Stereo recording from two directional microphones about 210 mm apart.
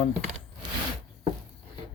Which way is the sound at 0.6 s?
20° right (ahead or behind).